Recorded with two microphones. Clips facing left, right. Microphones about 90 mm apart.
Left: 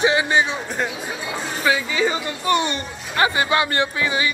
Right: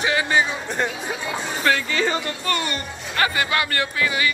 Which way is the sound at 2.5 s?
20° left (ahead or behind).